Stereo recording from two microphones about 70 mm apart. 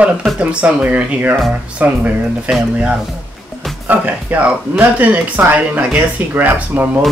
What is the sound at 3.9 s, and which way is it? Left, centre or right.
Speech, right.